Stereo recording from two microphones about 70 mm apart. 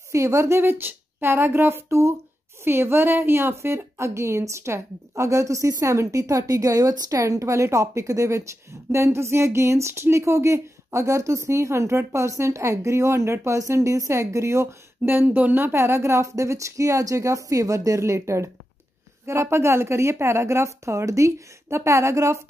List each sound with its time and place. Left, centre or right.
0.1 s a woman's voice: right
15.0 s speech: right
15.6 s a woman's voice: right